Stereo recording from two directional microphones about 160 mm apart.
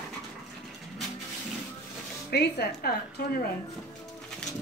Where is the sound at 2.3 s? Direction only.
85° left.